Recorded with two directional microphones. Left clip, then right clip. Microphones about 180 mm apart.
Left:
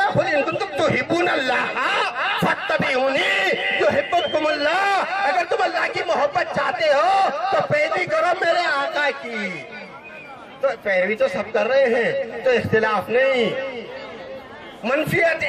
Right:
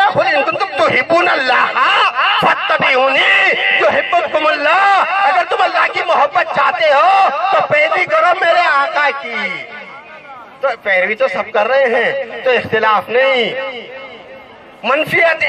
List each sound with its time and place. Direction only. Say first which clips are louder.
0.0 s a sound: right 7 dB; 10° left (ahead or behind)
10.7 s a man's voice: right 7 dB; 5° left (ahead or behind)
14.8 s a man's voice: right 7 dB; 10° left (ahead or behind)